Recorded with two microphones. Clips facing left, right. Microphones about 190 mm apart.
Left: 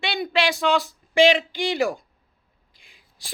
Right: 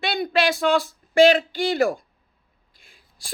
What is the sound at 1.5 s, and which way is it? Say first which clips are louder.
Speech: right 2 dB; 15° left (ahead or behind).